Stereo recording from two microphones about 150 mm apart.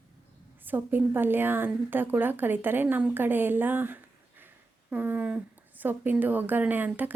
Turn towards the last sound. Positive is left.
turn(degrees=-10)  # may be behind; listen again after turning